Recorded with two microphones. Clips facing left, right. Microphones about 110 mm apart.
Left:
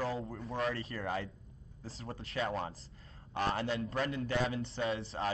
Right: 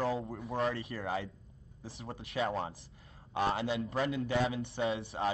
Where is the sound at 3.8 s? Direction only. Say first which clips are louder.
Right 2 dB; centre (ahead or behind).